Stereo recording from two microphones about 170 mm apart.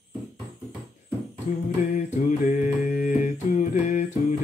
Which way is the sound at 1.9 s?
45° left (ahead or behind).